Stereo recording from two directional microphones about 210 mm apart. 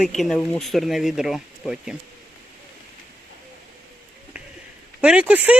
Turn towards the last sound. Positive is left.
turn(degrees=-5)  # may be behind; listen again after turning